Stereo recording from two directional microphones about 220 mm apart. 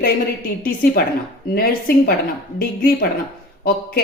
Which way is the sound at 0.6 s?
40° left (ahead or behind).